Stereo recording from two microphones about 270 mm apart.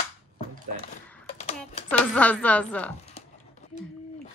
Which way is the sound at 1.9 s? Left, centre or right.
Centre.